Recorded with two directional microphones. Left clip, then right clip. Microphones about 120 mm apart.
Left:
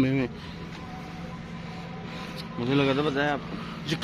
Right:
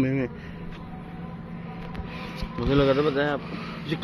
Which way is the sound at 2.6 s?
10° left (ahead or behind).